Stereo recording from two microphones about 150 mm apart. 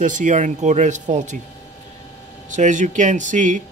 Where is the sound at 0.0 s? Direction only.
60° right (ahead or behind).